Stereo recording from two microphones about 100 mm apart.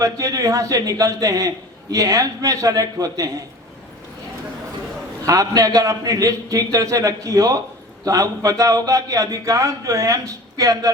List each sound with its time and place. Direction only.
0.0 s a man's voice: 35° right (ahead or behind)
5.2 s a man's voice: 35° right (ahead or behind)